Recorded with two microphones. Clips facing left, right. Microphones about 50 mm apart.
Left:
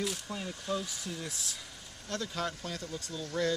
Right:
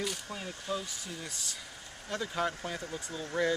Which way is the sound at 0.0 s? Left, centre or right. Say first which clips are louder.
Left 1 dB; centre.